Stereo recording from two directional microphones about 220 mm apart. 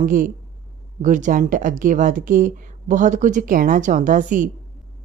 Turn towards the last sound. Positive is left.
turn(degrees=-35)  # may be behind; listen again after turning